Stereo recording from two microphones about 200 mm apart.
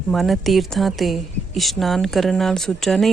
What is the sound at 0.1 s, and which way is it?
A woman's voice, centre (ahead or behind).